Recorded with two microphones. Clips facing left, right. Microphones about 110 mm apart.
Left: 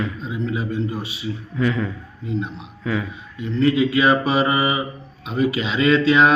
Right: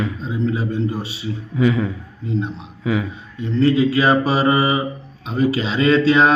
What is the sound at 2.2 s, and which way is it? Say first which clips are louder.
Speech: right 2 dB; 35° right (ahead or behind).